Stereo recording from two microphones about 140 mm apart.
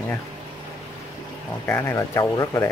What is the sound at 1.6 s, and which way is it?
Speech, 20° left (ahead or behind).